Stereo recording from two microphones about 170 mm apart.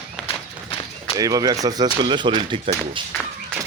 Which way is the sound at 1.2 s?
20° right (ahead or behind).